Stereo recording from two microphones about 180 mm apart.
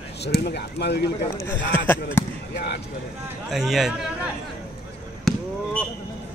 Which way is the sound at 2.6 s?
65° left (ahead or behind).